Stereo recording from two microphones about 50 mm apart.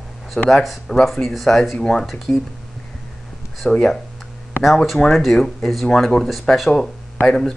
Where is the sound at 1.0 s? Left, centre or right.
Centre.